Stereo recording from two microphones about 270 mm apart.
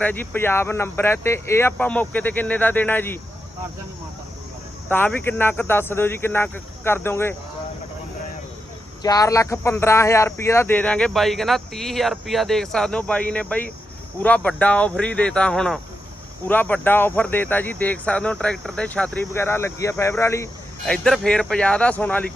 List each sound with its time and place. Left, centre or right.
0.0 s speech: centre
4.9 s speech: centre
9.0 s speech: centre